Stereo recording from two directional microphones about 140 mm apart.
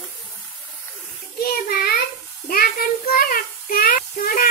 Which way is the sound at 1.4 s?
90° left.